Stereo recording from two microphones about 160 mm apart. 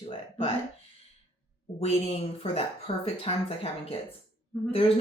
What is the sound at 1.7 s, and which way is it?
Speech, 40° left (ahead or behind).